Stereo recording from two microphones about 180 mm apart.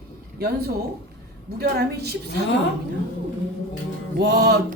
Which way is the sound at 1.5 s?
60° right (ahead or behind).